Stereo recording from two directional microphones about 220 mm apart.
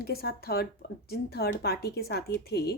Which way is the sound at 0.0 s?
45° left (ahead or behind).